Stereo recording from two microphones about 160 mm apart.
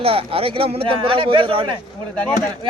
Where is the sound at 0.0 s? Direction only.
35° right (ahead or behind).